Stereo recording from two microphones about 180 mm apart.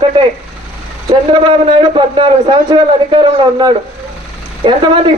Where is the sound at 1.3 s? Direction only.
25° right (ahead or behind).